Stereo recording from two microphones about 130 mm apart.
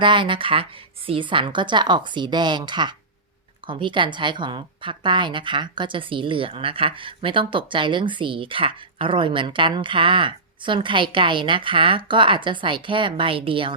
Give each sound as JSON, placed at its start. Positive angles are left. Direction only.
{"t": 0.0, "sound": "a woman's voice", "side_deg": -40}